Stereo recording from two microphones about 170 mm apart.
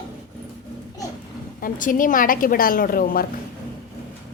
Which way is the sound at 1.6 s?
50° left (ahead or behind).